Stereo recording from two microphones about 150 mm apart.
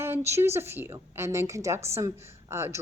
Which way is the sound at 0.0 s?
15° right (ahead or behind).